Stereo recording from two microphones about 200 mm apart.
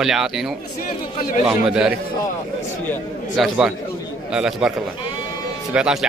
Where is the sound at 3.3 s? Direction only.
Centre (ahead or behind).